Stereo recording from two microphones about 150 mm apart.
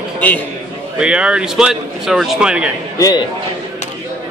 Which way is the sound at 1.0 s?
5° right (ahead or behind).